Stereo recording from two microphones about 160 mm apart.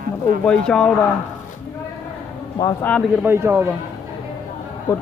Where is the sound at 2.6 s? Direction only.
20° left (ahead or behind).